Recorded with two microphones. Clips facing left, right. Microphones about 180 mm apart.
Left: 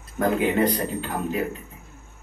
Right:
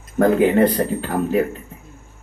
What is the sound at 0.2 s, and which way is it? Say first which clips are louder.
Speech: right 7 dB; 45° right (ahead or behind).